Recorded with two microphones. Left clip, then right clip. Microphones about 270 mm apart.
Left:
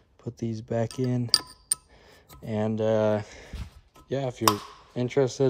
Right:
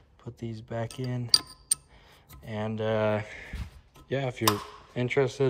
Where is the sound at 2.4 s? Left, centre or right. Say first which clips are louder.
Left 5 dB; left.